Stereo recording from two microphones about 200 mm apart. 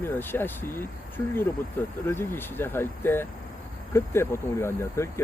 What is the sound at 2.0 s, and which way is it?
Speech, 10° left (ahead or behind).